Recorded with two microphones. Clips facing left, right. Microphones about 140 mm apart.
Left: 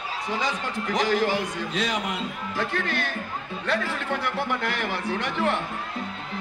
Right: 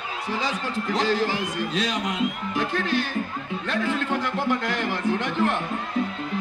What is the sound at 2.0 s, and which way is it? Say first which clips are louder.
Speech: right 4 dB; 20° right (ahead or behind).